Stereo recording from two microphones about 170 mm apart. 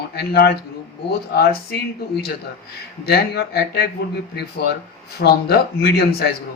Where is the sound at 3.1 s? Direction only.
70° left (ahead or behind).